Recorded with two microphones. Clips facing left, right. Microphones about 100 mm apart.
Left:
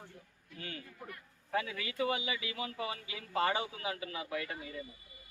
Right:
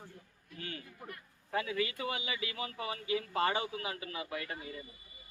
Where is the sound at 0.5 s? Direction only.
40° right (ahead or behind).